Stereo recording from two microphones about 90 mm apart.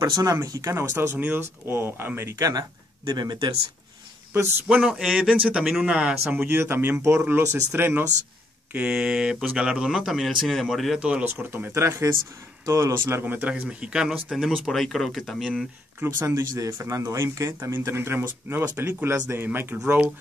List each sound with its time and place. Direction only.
0.2 s speech: 40° right (ahead or behind)
3.1 s speech: 50° right (ahead or behind)
4.6 s speech: 15° right (ahead or behind)
8.7 s speech: 10° right (ahead or behind)
11.2 s speech: 25° right (ahead or behind); by 15.6 s centre (ahead or behind)
16.0 s speech: 25° right (ahead or behind)